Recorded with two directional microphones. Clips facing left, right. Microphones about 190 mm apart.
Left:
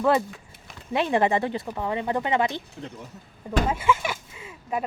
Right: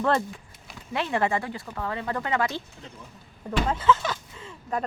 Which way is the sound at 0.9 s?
20° left (ahead or behind).